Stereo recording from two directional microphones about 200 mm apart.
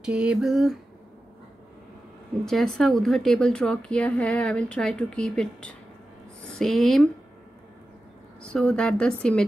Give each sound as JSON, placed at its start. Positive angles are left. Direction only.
{"t": 0.0, "sound": "a woman's voice", "side_deg": -5}
{"t": 2.4, "sound": "a woman's voice", "side_deg": 0}
{"t": 8.4, "sound": "a woman's voice", "side_deg": 5}